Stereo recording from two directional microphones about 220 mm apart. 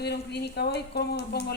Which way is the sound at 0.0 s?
50° left (ahead or behind).